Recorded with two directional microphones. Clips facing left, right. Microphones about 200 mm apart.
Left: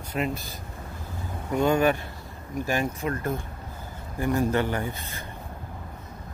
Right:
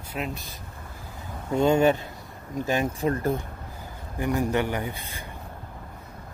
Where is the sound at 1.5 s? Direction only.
25° right (ahead or behind).